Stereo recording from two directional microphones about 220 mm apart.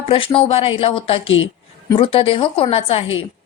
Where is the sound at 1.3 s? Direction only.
60° left (ahead or behind).